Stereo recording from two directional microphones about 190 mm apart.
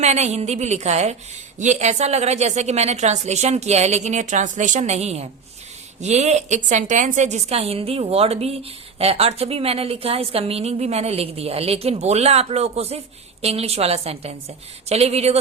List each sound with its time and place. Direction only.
0.0 s a woman's voice: 35° right (ahead or behind)